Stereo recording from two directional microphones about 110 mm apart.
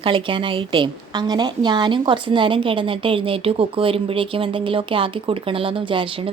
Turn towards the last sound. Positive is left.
turn(degrees=-50)  # may be behind; listen again after turning